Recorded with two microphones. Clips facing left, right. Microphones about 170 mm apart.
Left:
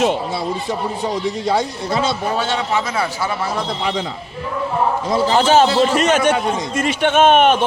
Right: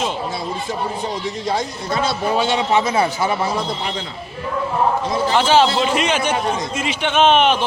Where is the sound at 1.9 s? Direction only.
25° left (ahead or behind).